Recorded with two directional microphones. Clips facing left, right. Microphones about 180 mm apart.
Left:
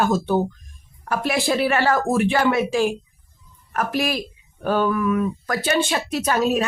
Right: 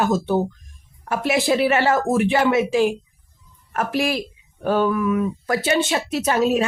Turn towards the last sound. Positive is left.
turn(degrees=-25)  # may be behind; listen again after turning